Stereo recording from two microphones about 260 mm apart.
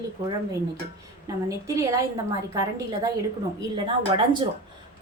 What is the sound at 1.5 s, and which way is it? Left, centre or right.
A woman's voice, centre.